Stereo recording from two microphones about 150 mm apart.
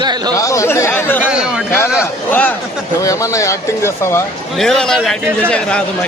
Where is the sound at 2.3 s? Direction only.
10° left (ahead or behind).